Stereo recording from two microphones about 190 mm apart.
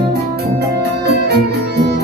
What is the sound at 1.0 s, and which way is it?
Music, 60° right (ahead or behind).